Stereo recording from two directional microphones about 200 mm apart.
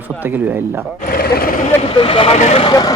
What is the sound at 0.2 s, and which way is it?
Speech, 10° right (ahead or behind).